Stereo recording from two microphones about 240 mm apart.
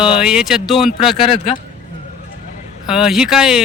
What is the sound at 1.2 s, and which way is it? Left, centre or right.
Speech, left.